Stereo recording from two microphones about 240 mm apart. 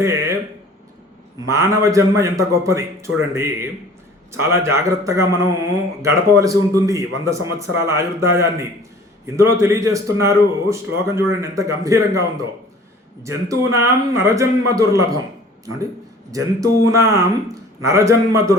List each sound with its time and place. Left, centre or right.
0.0 s a sound: centre
1.5 s a man's voice: centre
13.2 s a man's voice: centre
16.3 s a man's voice: centre